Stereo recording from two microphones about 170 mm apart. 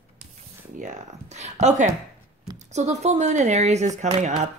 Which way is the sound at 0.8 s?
45° right (ahead or behind).